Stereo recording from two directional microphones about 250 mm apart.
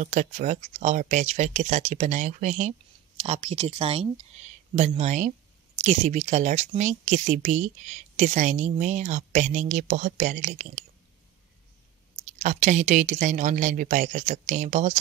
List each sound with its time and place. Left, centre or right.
0.0 s speech: right
12.4 s speech: right